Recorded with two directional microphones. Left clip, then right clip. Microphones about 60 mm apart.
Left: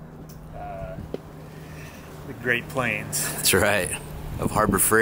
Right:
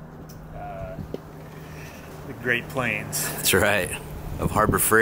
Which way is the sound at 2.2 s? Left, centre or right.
Centre.